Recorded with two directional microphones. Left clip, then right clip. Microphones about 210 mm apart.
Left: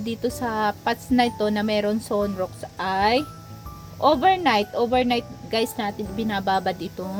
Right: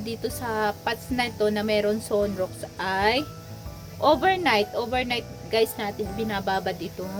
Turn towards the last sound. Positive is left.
turn(degrees=25)  # may be behind; listen again after turning